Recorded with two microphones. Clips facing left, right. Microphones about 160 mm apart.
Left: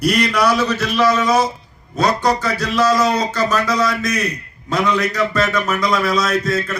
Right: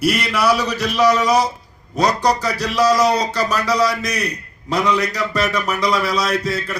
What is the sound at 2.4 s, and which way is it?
Speech, 15° right (ahead or behind).